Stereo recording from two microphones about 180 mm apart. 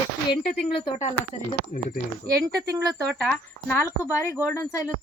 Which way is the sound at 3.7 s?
15° left (ahead or behind).